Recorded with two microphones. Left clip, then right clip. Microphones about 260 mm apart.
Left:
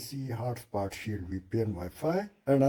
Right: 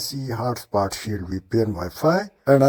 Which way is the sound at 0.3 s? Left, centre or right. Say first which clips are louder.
Right 11 dB; right.